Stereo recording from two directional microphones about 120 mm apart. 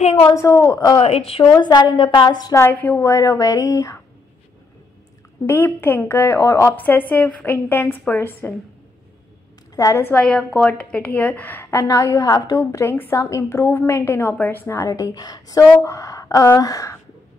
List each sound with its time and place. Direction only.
0.0 s speech: 60° left (ahead or behind)
0.3 s a woman's voice: 25° left (ahead or behind)
0.9 s speech: 55° left (ahead or behind)
1.4 s a woman's voice: 35° left (ahead or behind)
2.6 s a woman's voice: 15° left (ahead or behind)
5.5 s a woman's voice: 20° left (ahead or behind)
9.8 s a woman's voice: 25° left (ahead or behind)
10.0 s a woman's voice: 10° left (ahead or behind); by 17.0 s 25° left (ahead or behind)